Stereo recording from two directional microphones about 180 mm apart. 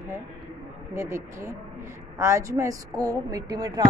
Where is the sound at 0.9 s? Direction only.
15° right (ahead or behind).